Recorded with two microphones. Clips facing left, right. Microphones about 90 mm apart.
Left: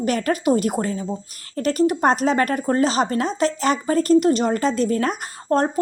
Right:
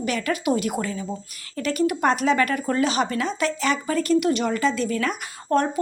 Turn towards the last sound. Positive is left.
turn(degrees=35)  # may be behind; listen again after turning